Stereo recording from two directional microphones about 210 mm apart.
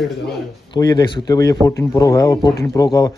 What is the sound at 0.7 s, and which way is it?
Speech, 20° left (ahead or behind).